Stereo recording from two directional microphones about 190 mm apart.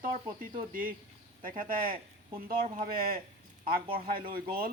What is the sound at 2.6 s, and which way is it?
Speech, 35° right (ahead or behind).